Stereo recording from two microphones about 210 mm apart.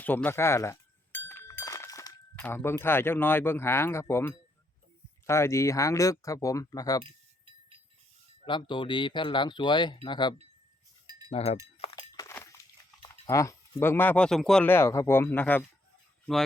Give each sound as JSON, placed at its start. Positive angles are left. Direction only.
{"t": 0.0, "sound": "speech", "side_deg": 10}
{"t": 8.4, "sound": "speech", "side_deg": 20}
{"t": 11.9, "sound": "a sound", "side_deg": 15}
{"t": 13.0, "sound": "speech", "side_deg": 15}